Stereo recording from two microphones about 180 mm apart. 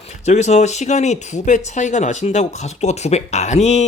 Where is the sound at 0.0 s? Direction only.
40° left (ahead or behind).